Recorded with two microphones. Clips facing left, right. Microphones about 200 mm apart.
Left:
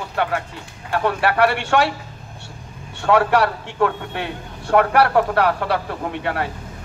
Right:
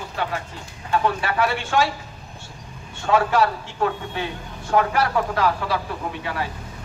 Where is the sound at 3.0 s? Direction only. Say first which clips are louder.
Left 3 dB; 65° left (ahead or behind).